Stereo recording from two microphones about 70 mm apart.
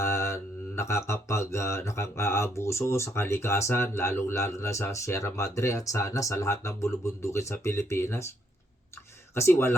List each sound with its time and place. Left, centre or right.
0.0 s mantra: left
9.3 s speech: left